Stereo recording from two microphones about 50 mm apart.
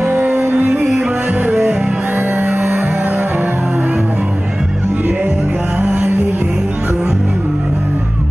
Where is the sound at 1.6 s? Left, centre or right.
Centre.